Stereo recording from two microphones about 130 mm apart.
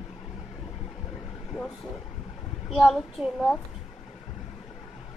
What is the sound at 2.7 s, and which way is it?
Speech, centre (ahead or behind).